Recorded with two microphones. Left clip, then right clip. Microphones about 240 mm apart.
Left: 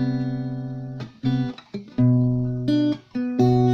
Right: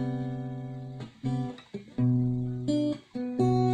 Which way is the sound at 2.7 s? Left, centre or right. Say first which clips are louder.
Left 7 dB; left.